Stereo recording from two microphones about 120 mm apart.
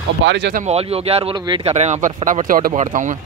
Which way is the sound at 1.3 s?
40° right (ahead or behind).